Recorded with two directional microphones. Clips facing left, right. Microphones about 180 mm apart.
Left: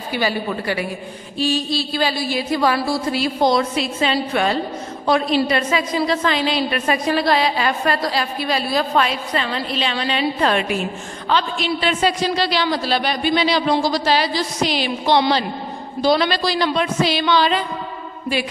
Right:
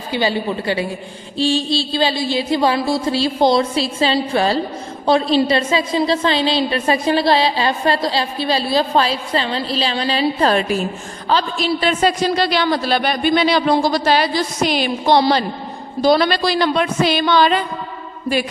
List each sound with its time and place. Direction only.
0.1 s a woman's voice: 25° right (ahead or behind); by 17.6 s 50° right (ahead or behind)